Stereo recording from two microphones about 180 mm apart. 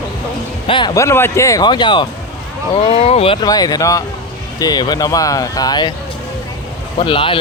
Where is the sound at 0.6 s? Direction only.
25° left (ahead or behind).